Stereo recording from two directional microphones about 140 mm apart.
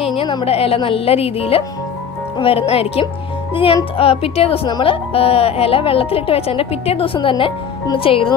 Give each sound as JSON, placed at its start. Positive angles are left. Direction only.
{"t": 0.0, "sound": "speech", "side_deg": 40}
{"t": 4.6, "sound": "speech", "side_deg": 30}
{"t": 5.1, "sound": "speech", "side_deg": 45}